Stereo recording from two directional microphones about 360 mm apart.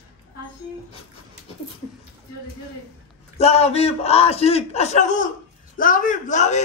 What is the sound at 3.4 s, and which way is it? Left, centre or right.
A man's voice, centre.